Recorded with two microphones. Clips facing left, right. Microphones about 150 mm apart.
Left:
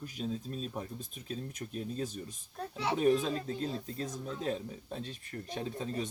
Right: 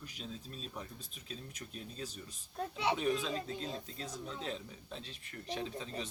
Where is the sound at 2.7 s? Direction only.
15° right (ahead or behind).